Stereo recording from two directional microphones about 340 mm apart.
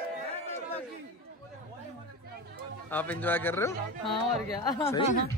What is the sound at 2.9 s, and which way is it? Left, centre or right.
Speech, centre.